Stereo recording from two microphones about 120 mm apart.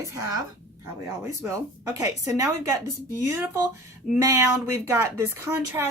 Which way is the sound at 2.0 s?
30° right (ahead or behind).